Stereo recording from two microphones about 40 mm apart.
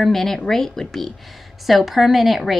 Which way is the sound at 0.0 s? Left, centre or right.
Centre.